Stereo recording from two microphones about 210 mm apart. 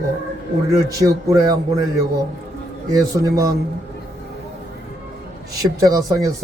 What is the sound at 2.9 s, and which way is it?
Speech, 15° right (ahead or behind).